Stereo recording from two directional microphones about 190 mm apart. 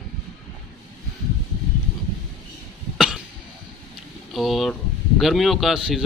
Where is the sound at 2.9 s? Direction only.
Centre (ahead or behind).